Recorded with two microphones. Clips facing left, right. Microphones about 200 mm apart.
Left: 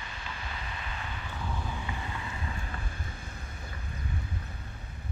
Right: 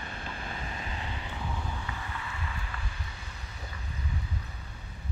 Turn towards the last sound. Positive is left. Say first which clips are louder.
# left 2 dB
turn(degrees=50)  # may be behind; listen again after turning